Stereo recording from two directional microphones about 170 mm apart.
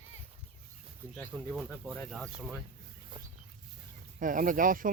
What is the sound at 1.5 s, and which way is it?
Speech, 10° right (ahead or behind).